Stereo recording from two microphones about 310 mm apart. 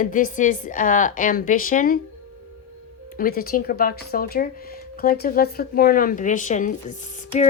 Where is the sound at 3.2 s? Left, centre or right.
Left.